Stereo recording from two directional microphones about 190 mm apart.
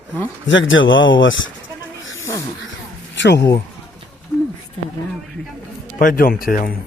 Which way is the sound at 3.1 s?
70° left (ahead or behind).